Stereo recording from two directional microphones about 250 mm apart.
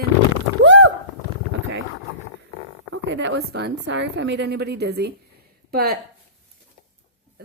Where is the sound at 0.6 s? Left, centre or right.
Right.